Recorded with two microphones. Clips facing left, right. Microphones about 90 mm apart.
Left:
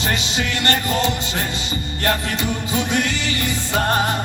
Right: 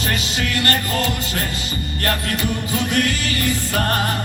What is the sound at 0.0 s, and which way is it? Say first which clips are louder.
Music: left 1 dB; 25° left (ahead or behind).